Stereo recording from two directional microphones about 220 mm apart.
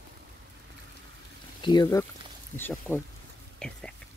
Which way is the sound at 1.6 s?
20° left (ahead or behind).